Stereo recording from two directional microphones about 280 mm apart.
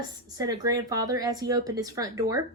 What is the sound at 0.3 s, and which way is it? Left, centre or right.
A woman's voice, centre.